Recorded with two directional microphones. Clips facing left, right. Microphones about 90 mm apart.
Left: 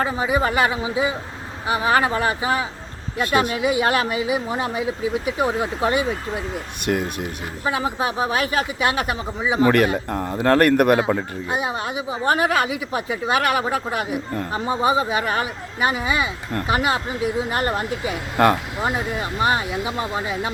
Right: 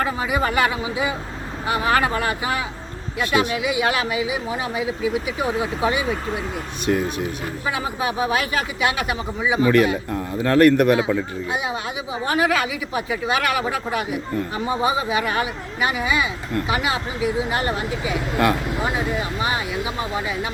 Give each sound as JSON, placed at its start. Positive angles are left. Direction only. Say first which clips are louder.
{"t": 0.0, "sound": "a man's voice", "louder": "left 1 dB", "side_deg": 25}
{"t": 3.2, "sound": "speech", "louder": "left 1 dB", "side_deg": 40}
{"t": 6.8, "sound": "speech", "louder": "right 2 dB", "side_deg": 60}
{"t": 7.6, "sound": "speech", "louder": "left 3 dB", "side_deg": 35}